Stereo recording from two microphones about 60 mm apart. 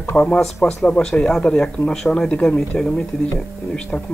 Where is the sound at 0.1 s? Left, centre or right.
Centre.